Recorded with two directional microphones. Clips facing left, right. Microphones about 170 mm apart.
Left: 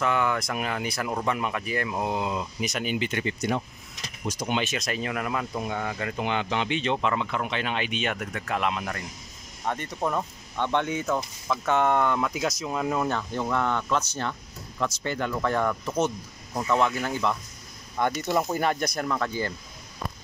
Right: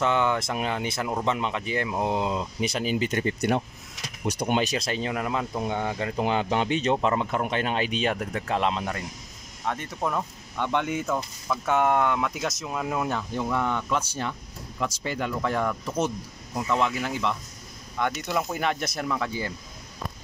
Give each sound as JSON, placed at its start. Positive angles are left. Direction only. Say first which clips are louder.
{"t": 0.0, "sound": "speech", "louder": "right 2 dB", "side_deg": -25}
{"t": 3.3, "sound": "speech", "louder": "right 3 dB", "side_deg": -60}
{"t": 4.6, "sound": "speech", "louder": "right 3 dB", "side_deg": -35}
{"t": 9.7, "sound": "speech", "louder": "left 1 dB", "side_deg": 0}
{"t": 18.6, "sound": "speech", "louder": "left 2 dB", "side_deg": -5}